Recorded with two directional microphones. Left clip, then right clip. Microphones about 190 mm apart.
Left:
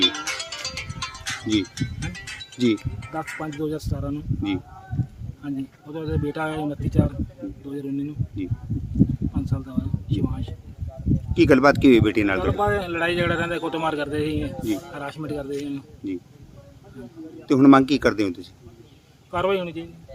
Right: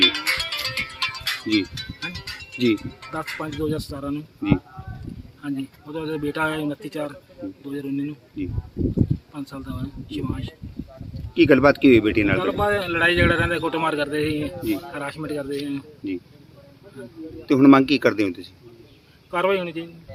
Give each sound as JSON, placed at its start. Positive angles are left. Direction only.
{"t": 0.0, "sound": "music", "side_deg": 0}
{"t": 1.1, "sound": "music", "side_deg": -30}
{"t": 1.6, "sound": "speech", "side_deg": -40}
{"t": 2.1, "sound": "music", "side_deg": -45}
{"t": 3.1, "sound": "speech", "side_deg": 5}
{"t": 17.5, "sound": "speech", "side_deg": 0}